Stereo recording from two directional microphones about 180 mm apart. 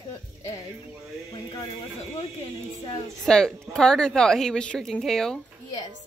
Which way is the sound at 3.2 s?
5° left (ahead or behind).